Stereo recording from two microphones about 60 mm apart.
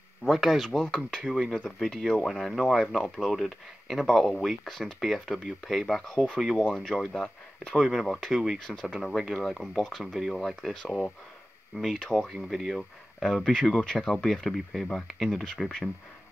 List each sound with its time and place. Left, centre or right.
0.3 s speech: centre
0.7 s speech: centre
1.2 s speech: centre
7.8 s speech: centre
11.7 s speech: centre
12.0 s speech: centre
12.3 s speech: centre
15.4 s speech: centre